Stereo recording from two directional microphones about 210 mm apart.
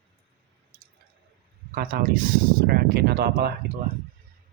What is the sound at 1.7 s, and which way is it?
Speech, 45° right (ahead or behind).